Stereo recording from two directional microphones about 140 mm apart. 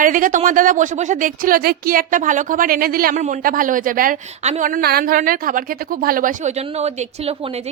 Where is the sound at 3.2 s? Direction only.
75° right (ahead or behind).